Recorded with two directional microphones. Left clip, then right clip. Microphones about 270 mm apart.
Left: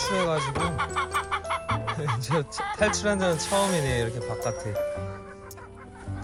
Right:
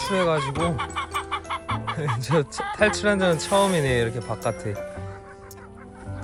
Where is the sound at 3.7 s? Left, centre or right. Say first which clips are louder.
Right 4 dB; left.